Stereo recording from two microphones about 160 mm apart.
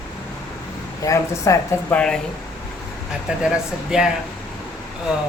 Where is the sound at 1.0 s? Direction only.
20° left (ahead or behind).